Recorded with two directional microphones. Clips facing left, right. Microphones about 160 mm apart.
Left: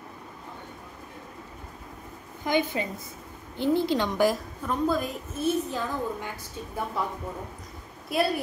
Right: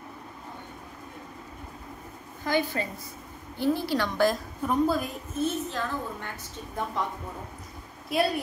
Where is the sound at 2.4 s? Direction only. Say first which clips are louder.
Left 1 dB; 20° left (ahead or behind).